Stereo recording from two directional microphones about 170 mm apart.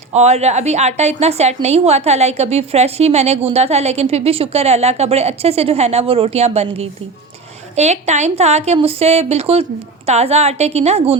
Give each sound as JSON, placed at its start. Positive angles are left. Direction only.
{"t": 0.1, "sound": "a woman's voice", "side_deg": -40}